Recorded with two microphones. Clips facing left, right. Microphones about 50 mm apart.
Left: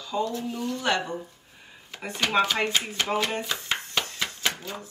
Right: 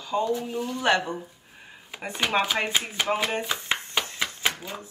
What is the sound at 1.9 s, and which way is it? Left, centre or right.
Speech, centre.